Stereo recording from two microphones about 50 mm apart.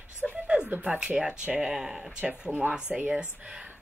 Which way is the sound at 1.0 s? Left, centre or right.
Centre.